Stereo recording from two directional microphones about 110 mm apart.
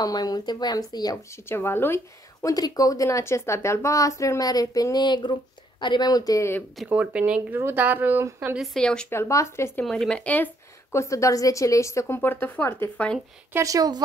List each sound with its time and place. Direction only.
0.0 s a woman's voice: 35° left (ahead or behind); by 2.0 s 20° left (ahead or behind)
2.4 s a woman's voice: 35° left (ahead or behind)
6.9 s speech: 10° right (ahead or behind)
8.5 s speech: 5° left (ahead or behind)
9.1 s a woman's voice: 25° left (ahead or behind)
9.8 s a woman's voice: 5° left (ahead or behind)
13.5 s speech: 30° right (ahead or behind)